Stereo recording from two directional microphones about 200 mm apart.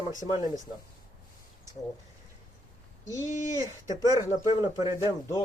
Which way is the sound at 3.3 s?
40° left (ahead or behind).